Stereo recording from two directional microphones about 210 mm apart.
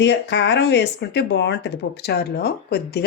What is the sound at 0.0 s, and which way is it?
Speech, 55° left (ahead or behind).